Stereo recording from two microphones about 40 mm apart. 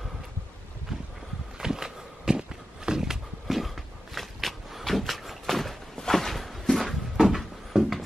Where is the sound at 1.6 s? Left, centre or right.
Centre.